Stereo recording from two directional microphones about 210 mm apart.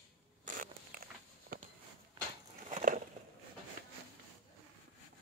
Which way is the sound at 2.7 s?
35° right (ahead or behind).